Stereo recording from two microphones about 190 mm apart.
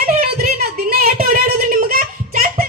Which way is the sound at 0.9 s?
55° right (ahead or behind).